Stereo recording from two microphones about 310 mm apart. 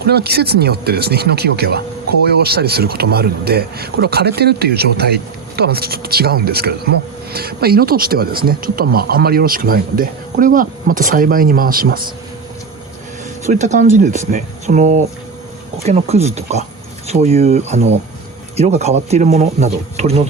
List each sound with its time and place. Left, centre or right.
0.0 s speech: right
13.4 s speech: right